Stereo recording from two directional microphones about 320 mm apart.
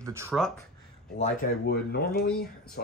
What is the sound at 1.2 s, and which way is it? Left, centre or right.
Speech, left.